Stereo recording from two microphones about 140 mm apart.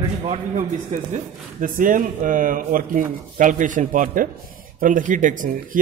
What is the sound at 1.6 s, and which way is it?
Speech, 75° right (ahead or behind).